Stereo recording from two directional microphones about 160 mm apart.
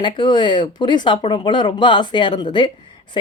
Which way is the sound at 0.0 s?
30° left (ahead or behind).